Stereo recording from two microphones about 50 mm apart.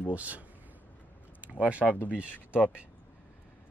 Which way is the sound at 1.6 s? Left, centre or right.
Right.